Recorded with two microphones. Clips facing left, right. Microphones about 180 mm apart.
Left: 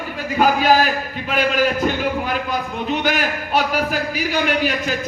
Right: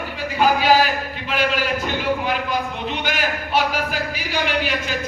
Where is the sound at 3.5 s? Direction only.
45° left (ahead or behind).